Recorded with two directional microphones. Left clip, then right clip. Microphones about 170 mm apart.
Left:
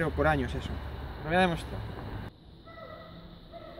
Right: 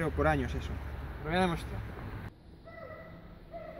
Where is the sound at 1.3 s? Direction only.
60° left (ahead or behind).